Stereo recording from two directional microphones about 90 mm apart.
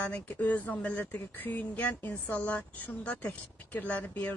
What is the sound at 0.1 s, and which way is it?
Speech, 15° left (ahead or behind).